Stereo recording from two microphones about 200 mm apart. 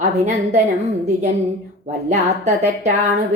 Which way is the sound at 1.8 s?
35° right (ahead or behind).